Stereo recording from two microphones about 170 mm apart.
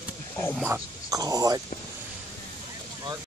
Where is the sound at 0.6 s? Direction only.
15° right (ahead or behind).